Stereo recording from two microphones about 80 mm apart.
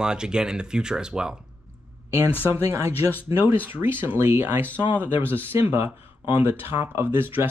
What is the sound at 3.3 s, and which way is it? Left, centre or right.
Speech, right.